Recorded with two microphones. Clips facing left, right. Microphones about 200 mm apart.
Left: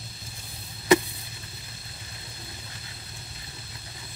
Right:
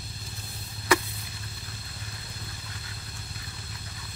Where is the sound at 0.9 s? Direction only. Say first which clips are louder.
Left 5 dB; 20° left (ahead or behind).